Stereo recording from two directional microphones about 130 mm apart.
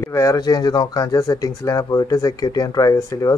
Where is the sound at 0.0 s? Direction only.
20° left (ahead or behind).